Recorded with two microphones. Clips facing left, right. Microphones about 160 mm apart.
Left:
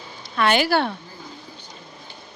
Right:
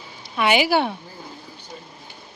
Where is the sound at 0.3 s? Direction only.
10° right (ahead or behind).